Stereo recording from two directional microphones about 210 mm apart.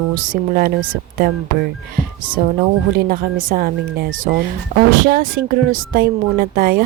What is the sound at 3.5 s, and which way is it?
A woman's voice, 40° right (ahead or behind).